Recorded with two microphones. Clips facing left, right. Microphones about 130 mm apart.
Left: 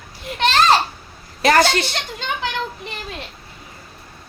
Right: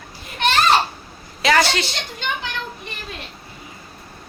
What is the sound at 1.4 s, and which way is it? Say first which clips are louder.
Speech: left 3 dB; 45° left (ahead or behind).